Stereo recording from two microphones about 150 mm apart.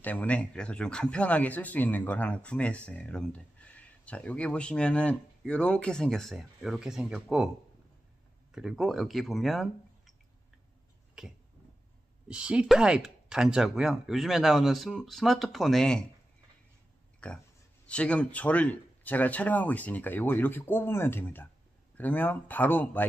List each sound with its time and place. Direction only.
0.0 s speech: 10° left (ahead or behind); by 7.4 s 5° right (ahead or behind)
8.5 s speech: centre (ahead or behind)
11.2 s speech: 5° right (ahead or behind)
17.2 s speech: 10° left (ahead or behind)